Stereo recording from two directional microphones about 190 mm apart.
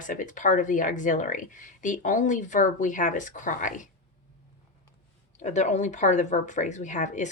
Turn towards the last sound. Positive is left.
turn(degrees=40)  # may be behind; listen again after turning